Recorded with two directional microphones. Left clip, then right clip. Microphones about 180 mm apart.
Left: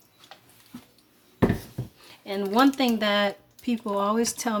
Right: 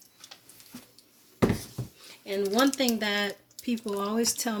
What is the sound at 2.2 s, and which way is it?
Speech, 40° left (ahead or behind).